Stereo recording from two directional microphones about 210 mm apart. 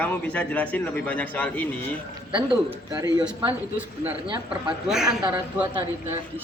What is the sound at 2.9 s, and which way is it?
Speech, 15° right (ahead or behind).